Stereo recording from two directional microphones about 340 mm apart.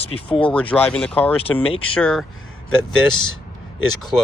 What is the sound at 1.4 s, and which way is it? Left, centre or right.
Speech, centre.